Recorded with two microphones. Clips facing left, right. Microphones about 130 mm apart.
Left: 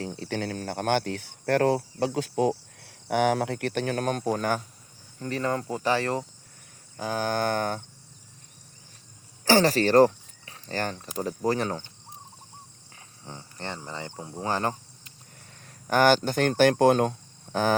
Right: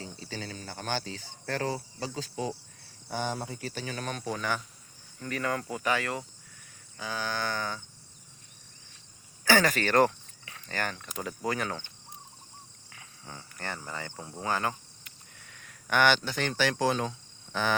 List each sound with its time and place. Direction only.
0.0 s speech: 65° left (ahead or behind); by 4.6 s 45° left (ahead or behind)
5.2 s speech: 30° left (ahead or behind)
6.9 s a sound: 50° left (ahead or behind)
9.4 s speech: 35° left (ahead or behind)
12.9 s speech: 30° left (ahead or behind)